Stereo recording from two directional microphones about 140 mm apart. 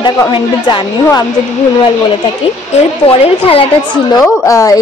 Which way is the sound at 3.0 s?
45° left (ahead or behind).